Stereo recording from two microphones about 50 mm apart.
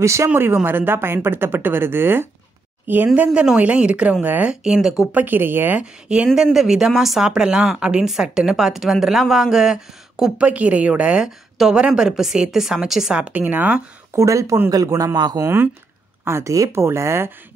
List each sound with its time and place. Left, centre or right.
0.0 s speech: right
0.3 s speech: right
3.5 s speech: right
4.5 s a woman's voice: centre
5.1 s speech: right
5.8 s speech: right
6.3 s a woman's voice: centre
10.3 s a woman's voice: right; by 13.1 s centre
13.3 s speech: right
14.1 s speech: right
14.9 s a man's voice: right
16.3 s speech: right
16.8 s a man's voice: right